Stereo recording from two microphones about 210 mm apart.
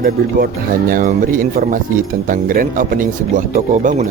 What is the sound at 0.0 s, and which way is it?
Speech, 45° right (ahead or behind).